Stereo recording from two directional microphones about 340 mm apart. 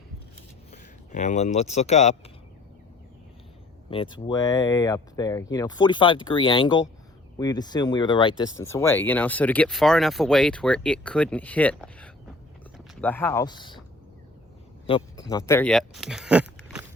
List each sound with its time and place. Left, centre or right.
0.7 s speech: left
3.8 s speech: centre
14.8 s speech: centre